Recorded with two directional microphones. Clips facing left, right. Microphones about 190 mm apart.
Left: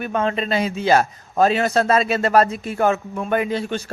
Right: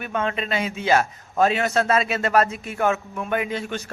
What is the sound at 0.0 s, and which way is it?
A man's voice, 35° left (ahead or behind).